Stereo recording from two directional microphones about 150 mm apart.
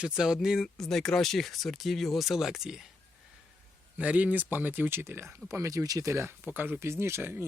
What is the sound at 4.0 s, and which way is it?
Speech, 10° right (ahead or behind).